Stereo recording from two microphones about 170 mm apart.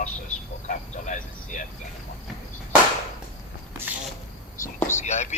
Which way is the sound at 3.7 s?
15° right (ahead or behind).